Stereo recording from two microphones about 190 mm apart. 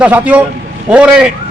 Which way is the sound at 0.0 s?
5° right (ahead or behind).